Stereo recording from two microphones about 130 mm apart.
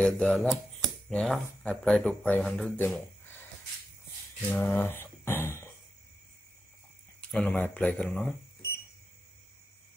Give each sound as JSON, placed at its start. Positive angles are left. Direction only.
{"t": 0.0, "sound": "speech", "side_deg": 5}
{"t": 4.4, "sound": "a sound", "side_deg": 15}
{"t": 7.2, "sound": "speech", "side_deg": 5}